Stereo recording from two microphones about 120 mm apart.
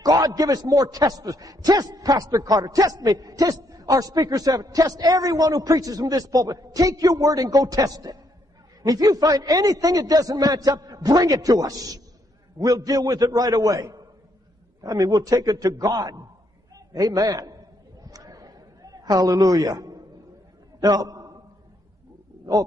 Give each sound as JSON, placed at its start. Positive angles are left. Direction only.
{"t": 0.0, "sound": "a man's voice", "side_deg": -30}
{"t": 18.0, "sound": "a sound", "side_deg": -30}
{"t": 20.8, "sound": "a man's voice", "side_deg": -30}